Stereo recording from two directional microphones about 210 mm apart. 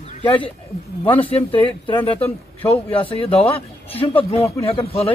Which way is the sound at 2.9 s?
25° left (ahead or behind).